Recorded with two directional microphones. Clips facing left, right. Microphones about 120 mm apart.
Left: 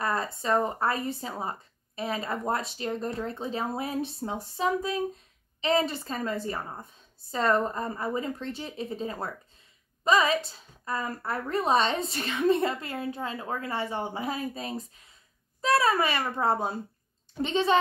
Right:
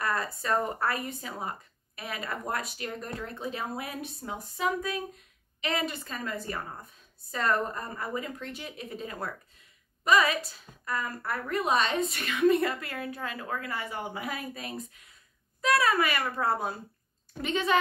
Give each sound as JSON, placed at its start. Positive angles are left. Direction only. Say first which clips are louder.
{"t": 0.0, "sound": "speech", "louder": "left 2 dB", "side_deg": 25}